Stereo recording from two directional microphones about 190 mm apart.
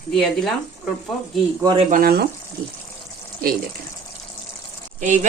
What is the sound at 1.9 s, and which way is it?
Speech, 55° right (ahead or behind).